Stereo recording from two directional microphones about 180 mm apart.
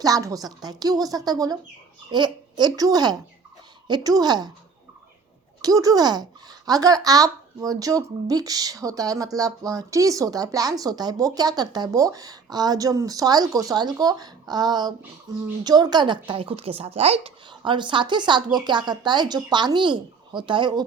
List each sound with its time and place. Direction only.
0.0 s speech: 20° right (ahead or behind)
5.6 s speech: 20° right (ahead or behind)